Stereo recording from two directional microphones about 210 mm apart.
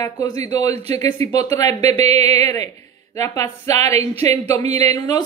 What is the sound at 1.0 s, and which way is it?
Speech, 20° left (ahead or behind).